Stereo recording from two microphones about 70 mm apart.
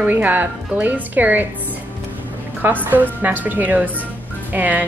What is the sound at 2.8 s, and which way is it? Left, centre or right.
Speech, right.